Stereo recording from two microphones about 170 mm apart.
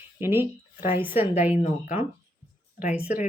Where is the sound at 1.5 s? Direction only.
50° left (ahead or behind).